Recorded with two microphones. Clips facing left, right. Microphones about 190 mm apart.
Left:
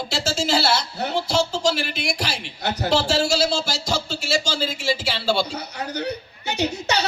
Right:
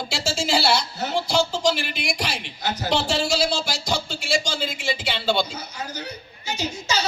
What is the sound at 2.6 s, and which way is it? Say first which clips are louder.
Speech: left 3 dB; 60° left (ahead or behind).